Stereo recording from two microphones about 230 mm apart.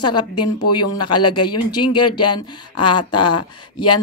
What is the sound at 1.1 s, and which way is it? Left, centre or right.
Speech, left.